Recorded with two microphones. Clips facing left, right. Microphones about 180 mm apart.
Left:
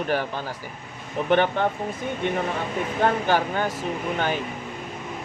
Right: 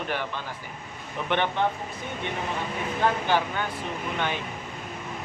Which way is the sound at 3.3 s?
40° left (ahead or behind).